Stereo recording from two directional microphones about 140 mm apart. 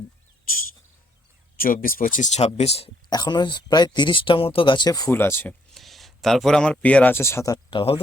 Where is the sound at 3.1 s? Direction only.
30° left (ahead or behind).